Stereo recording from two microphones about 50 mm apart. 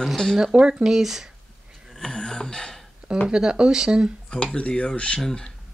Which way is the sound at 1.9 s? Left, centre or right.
Centre.